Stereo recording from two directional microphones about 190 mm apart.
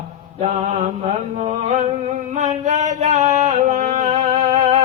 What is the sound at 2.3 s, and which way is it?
Music, 40° right (ahead or behind).